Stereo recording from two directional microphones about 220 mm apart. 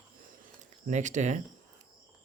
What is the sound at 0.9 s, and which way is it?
Speech, 35° right (ahead or behind).